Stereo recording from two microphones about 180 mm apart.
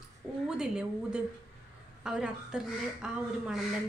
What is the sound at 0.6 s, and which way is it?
A woman's voice, 5° right (ahead or behind).